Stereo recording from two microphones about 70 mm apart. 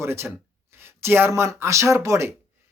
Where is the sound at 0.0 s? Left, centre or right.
Right.